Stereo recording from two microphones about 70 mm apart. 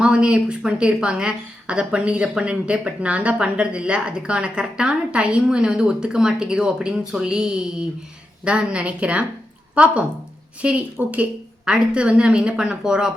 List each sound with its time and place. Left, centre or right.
0.0 s a woman's voice: centre